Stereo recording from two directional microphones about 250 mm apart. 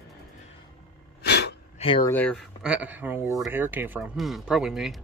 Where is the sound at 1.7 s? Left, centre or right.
Left.